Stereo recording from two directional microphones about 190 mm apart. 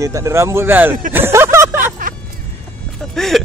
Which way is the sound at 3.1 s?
Centre (ahead or behind).